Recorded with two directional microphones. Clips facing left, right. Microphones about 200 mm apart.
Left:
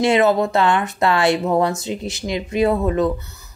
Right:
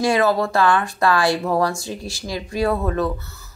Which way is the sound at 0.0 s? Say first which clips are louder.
Left 3 dB; 20° left (ahead or behind).